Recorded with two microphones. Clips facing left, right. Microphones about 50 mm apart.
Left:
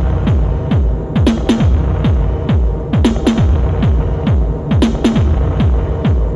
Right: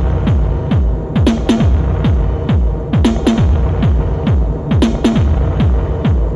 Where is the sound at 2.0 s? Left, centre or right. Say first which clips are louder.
Even; centre.